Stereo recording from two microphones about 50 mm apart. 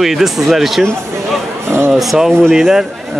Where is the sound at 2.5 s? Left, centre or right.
Centre.